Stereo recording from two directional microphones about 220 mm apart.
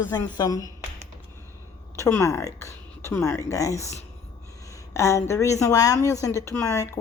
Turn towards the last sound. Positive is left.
turn(degrees=15)  # may be behind; listen again after turning